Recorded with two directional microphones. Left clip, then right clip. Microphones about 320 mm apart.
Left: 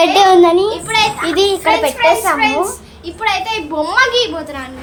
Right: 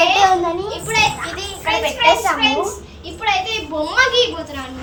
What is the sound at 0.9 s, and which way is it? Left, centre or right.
A child's voice, centre.